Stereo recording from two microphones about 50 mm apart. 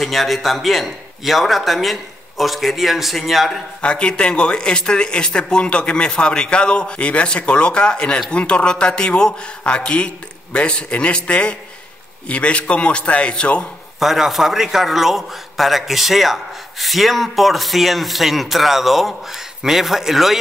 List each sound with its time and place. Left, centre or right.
0.0 s a man's voice: centre
3.8 s speech: left
13.9 s a man's voice: centre